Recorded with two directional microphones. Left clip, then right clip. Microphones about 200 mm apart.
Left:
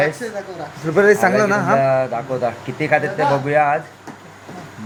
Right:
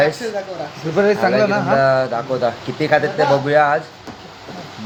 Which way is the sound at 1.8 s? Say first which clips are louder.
Right 2 dB; 10° right (ahead or behind).